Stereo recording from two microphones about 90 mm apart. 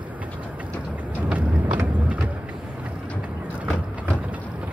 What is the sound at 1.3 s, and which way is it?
Vehicle, 15° right (ahead or behind).